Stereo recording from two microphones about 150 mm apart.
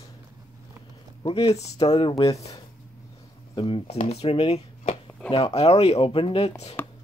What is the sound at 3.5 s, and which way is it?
Speech, 35° left (ahead or behind).